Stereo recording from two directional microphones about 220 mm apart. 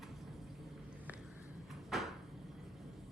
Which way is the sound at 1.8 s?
Centre (ahead or behind).